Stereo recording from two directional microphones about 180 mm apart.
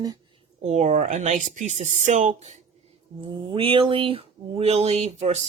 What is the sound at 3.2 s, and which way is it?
Speech, 30° right (ahead or behind).